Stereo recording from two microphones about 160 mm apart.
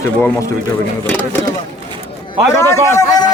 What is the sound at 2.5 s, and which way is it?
Speech, 15° left (ahead or behind).